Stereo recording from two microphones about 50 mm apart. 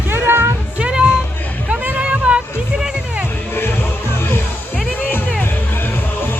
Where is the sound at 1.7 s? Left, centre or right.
Right.